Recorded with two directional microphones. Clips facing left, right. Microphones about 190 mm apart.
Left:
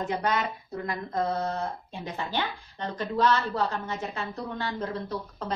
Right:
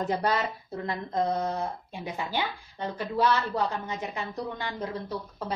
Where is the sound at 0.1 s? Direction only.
35° right (ahead or behind).